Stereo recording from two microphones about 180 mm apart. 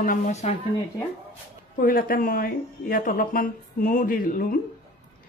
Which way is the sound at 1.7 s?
50° left (ahead or behind).